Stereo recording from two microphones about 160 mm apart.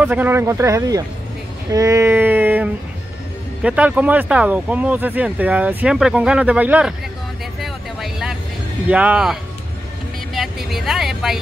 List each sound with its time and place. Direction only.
0.0 s speech: 10° right (ahead or behind)
1.7 s female singing: 20° right (ahead or behind)
3.6 s speech: 10° right (ahead or behind)
7.6 s vehicle: centre (ahead or behind)
8.8 s speech: 10° right (ahead or behind)
10.3 s vehicle: centre (ahead or behind)